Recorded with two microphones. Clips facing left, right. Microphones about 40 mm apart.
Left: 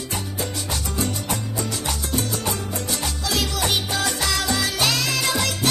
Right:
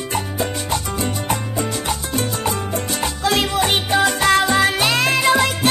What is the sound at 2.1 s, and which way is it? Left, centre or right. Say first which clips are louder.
Salsa music: right 4 dB; right.